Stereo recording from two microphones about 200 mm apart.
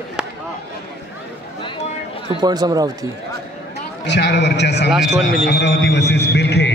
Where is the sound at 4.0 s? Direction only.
60° left (ahead or behind).